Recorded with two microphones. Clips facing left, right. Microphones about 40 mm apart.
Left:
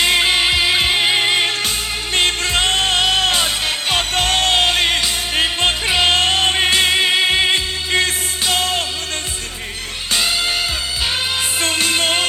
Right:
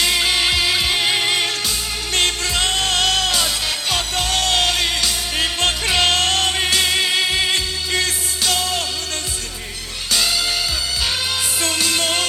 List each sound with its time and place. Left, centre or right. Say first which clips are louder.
0.0 s music: left 3 dB; left
10.1 s music: left 1 dB; left
11.6 s music: left 3 dB; left